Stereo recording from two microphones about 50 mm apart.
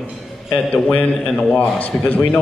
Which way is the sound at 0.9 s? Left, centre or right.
Left.